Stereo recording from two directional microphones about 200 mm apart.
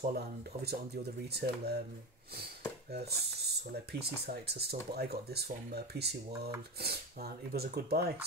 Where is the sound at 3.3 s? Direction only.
55° right (ahead or behind).